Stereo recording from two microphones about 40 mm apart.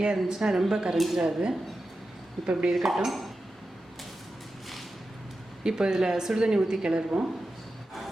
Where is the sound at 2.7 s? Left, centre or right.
Centre.